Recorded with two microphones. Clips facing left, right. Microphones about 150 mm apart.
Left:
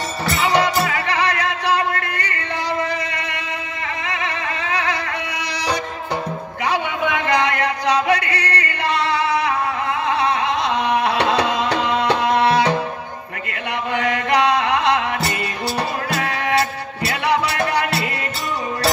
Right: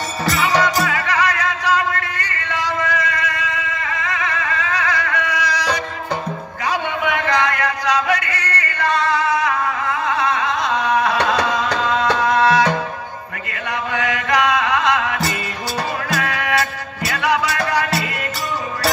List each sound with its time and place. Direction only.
0.4 s music: 30° left (ahead or behind)
2.5 s a sound: 30° left (ahead or behind)
4.0 s music: 25° left (ahead or behind)
7.3 s music: 30° left (ahead or behind)
10.0 s a sound: 30° left (ahead or behind)
10.9 s music: 25° left (ahead or behind)
13.9 s music: 30° left (ahead or behind)